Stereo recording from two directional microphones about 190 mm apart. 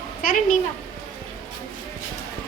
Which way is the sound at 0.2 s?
45° left (ahead or behind).